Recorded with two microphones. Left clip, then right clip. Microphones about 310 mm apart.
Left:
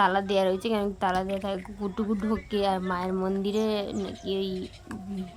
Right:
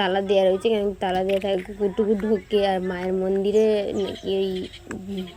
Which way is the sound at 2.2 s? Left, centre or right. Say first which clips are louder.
Right 6 dB; left.